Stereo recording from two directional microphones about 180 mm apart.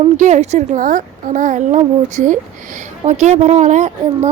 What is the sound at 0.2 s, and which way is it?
A child's voice, 40° right (ahead or behind).